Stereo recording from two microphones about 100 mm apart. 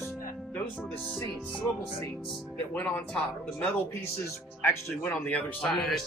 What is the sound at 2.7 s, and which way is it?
Speech, 10° left (ahead or behind).